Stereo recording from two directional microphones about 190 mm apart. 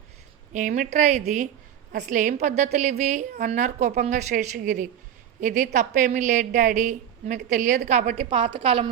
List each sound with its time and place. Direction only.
0.5 s a woman's voice: 40° right (ahead or behind)